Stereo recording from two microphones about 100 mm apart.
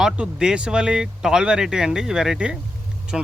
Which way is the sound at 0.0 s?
5° right (ahead or behind).